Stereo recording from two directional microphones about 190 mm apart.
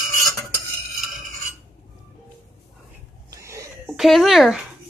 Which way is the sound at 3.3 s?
15° right (ahead or behind).